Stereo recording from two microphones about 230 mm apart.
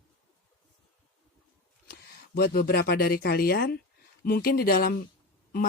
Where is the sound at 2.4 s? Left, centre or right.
Left.